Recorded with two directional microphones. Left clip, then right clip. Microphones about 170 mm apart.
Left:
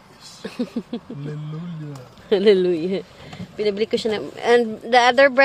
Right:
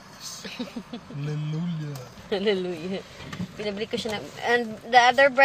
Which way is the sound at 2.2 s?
75° left (ahead or behind).